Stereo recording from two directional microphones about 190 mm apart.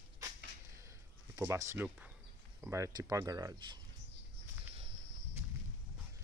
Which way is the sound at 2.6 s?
15° right (ahead or behind).